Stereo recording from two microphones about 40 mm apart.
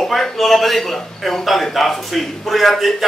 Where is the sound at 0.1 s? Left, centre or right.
Centre.